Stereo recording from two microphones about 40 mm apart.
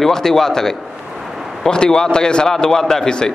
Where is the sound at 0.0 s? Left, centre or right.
Centre.